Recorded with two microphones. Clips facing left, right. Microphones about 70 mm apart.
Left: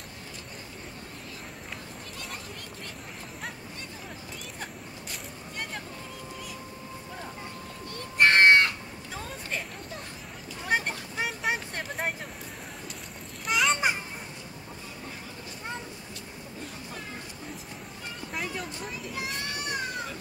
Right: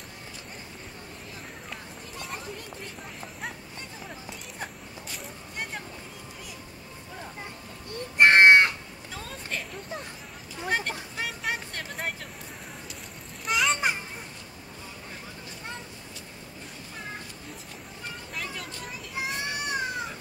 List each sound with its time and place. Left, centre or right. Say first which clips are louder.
8.2 s crow: right 3 dB; right
9.1 s vehicle: even; centre
10.7 s vehicle: left 1 dB; centre
13.5 s children playing: even; centre
19.1 s children playing: right 5 dB; right